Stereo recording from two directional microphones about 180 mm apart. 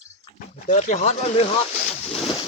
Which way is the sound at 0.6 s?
45° left (ahead or behind).